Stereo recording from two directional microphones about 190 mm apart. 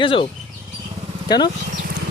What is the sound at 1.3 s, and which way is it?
Speech, 20° left (ahead or behind).